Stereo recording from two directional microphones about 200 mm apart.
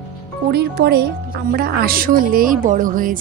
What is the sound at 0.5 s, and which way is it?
Speech, 55° right (ahead or behind).